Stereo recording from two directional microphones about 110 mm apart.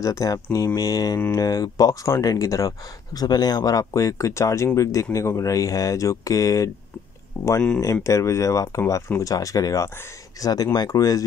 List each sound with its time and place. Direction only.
0.0 s speech: 30° left (ahead or behind)